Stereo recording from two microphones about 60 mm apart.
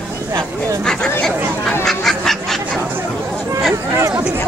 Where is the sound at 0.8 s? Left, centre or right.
Centre.